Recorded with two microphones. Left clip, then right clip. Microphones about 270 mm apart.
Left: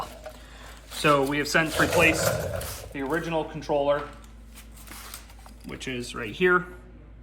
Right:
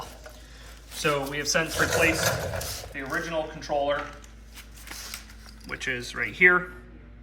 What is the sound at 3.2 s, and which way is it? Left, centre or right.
Speech, centre.